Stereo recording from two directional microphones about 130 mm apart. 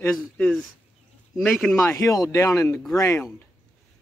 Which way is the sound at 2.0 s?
25° left (ahead or behind).